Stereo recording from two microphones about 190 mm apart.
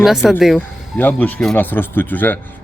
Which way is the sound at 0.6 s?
10° left (ahead or behind).